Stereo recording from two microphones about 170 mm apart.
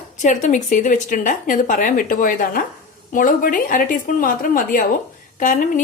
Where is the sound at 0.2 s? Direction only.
45° left (ahead or behind).